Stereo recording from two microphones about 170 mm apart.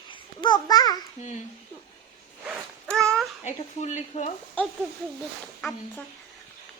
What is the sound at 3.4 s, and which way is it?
Speech, 45° left (ahead or behind).